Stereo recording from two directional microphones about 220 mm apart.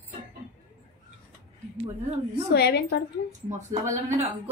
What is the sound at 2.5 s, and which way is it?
Speech, 50° left (ahead or behind).